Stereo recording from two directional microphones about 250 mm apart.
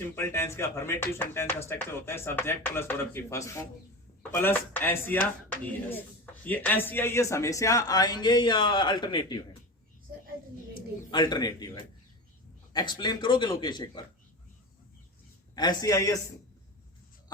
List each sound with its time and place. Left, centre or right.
0.2 s speech: centre
11.1 s speech: centre
15.5 s speech: centre